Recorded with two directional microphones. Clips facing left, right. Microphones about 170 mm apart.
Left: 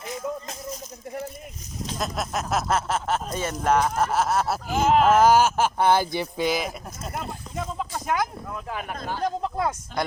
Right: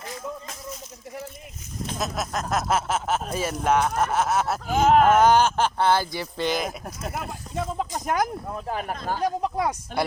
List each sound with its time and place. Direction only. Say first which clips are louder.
2.0 s speech: even; 5° left (ahead or behind)
4.6 s speech: right 3 dB; 55° right (ahead or behind)
5.0 s speech: even; centre (ahead or behind); by 6.4 s 20° left (ahead or behind)
6.4 s speech: even; 5° left (ahead or behind)
8.0 s speech: right 1 dB; 40° right (ahead or behind)
9.2 s speech: right 1 dB; 15° right (ahead or behind)